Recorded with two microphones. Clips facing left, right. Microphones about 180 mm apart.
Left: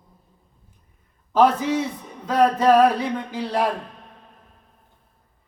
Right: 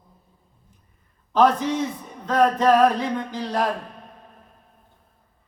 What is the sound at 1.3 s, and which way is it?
A man's voice, 5° left (ahead or behind).